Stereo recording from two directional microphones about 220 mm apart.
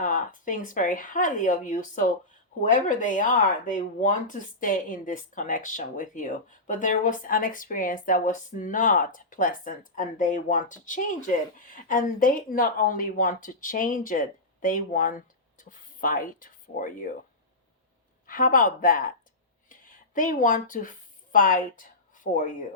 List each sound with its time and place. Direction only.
0.0 s speech: 35° left (ahead or behind)
18.3 s speech: 40° left (ahead or behind)
19.6 s a sound: 35° left (ahead or behind)
21.3 s a woman's voice: 35° left (ahead or behind)